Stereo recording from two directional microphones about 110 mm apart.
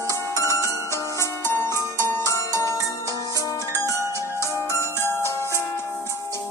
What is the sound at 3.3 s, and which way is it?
Music, 25° left (ahead or behind).